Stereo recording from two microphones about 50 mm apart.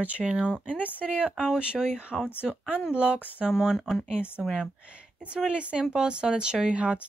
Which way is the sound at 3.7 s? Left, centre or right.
Centre.